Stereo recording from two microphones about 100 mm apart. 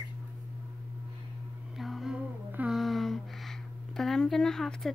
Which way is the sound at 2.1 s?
15° right (ahead or behind).